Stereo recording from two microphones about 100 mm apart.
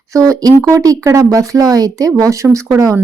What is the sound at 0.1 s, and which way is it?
Speech, 35° right (ahead or behind).